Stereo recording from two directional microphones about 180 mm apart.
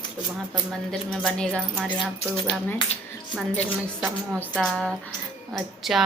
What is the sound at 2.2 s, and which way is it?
Speech, 30° left (ahead or behind).